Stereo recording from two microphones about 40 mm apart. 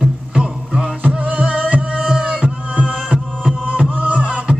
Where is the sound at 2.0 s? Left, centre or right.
Right.